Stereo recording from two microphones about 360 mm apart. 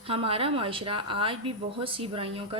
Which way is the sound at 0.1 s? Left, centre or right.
Centre.